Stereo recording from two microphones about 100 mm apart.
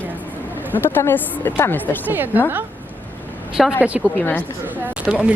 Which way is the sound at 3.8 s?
15° right (ahead or behind).